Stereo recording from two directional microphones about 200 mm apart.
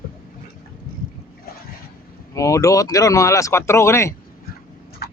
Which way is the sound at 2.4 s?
15° left (ahead or behind).